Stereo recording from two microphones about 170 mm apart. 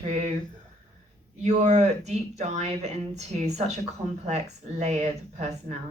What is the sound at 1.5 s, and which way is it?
Speech, 40° right (ahead or behind).